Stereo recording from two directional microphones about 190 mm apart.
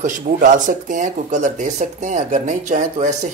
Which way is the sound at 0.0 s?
40° right (ahead or behind).